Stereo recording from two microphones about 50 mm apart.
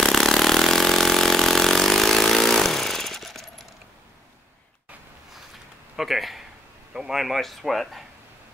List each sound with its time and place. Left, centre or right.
0.0 s vehicle: centre
5.9 s speech: centre